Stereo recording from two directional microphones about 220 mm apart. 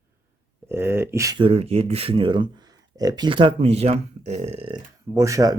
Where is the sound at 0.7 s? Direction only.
10° right (ahead or behind).